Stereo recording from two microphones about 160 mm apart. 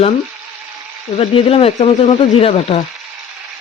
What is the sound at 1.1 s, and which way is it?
Speech, 35° left (ahead or behind).